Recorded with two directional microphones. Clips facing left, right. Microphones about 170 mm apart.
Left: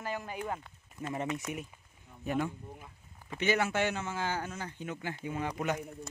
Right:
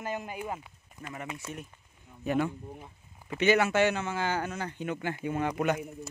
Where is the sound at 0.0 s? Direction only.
20° right (ahead or behind).